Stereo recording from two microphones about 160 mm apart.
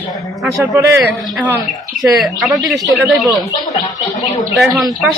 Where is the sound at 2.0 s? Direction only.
Centre (ahead or behind).